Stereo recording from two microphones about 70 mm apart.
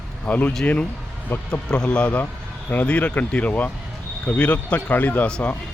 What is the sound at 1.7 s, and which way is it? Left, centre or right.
Speech, centre.